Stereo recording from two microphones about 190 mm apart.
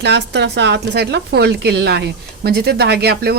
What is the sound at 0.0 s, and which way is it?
Speech, 65° right (ahead or behind).